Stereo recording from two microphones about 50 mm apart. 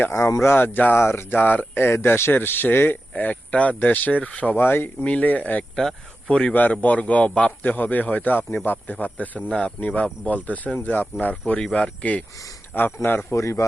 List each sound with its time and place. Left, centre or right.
0.1 s speech: left
0.4 s speech: left
0.9 s speech: left
2.3 s speech: left
3.2 s speech: left
4.5 s speech: left
5.0 s speech: left
5.7 s speech: centre
6.5 s speech: left
7.6 s speech: left
9.5 s speech: centre
12.7 s speech: left
13.3 s a man's voice: left